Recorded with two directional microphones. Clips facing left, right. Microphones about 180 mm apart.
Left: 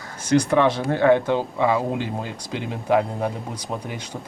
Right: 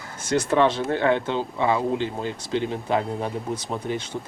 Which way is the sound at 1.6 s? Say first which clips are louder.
Right 3 dB; 25° right (ahead or behind).